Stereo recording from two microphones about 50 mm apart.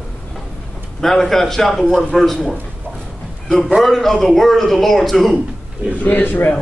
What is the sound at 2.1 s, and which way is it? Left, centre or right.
Speech, centre.